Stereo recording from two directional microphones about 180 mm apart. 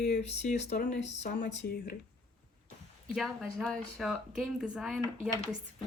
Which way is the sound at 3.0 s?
Centre (ahead or behind).